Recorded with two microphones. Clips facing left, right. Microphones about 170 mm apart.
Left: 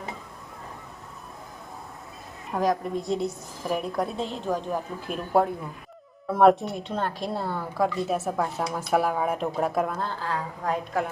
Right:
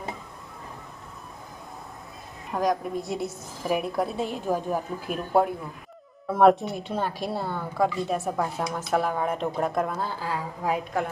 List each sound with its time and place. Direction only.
2.5 s a woman's voice: centre (ahead or behind)